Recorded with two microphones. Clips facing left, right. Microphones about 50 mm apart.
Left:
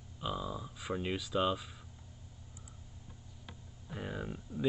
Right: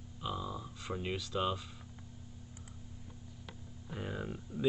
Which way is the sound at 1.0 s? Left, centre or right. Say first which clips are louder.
Left 2 dB; centre.